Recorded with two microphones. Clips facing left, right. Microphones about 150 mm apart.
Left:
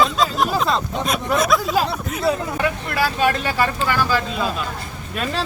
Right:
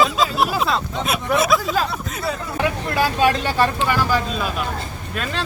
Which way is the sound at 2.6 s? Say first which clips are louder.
Right 1 dB; 20° right (ahead or behind).